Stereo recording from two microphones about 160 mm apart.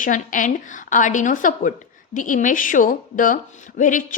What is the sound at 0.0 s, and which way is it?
A woman's voice, 55° left (ahead or behind).